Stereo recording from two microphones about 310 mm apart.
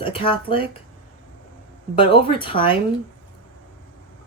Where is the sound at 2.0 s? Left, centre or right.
Centre.